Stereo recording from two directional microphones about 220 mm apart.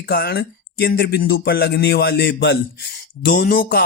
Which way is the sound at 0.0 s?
45° left (ahead or behind).